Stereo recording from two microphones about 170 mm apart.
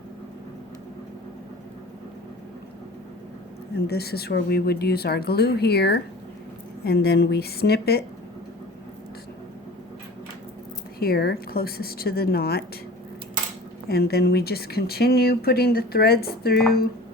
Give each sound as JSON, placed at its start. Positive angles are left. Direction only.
{"t": 3.8, "sound": "speech", "side_deg": 70}
{"t": 11.0, "sound": "a woman's voice", "side_deg": 65}
{"t": 13.8, "sound": "speech", "side_deg": 70}